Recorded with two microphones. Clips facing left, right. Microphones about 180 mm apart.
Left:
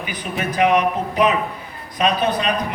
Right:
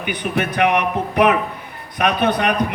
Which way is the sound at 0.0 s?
65° right (ahead or behind).